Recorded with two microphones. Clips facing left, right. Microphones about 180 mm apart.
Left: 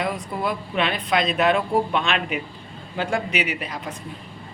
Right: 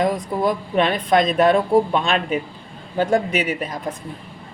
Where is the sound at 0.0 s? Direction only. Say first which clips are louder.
Right 6 dB; 40° right (ahead or behind).